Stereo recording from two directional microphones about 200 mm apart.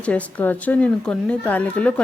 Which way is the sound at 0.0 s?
5° left (ahead or behind).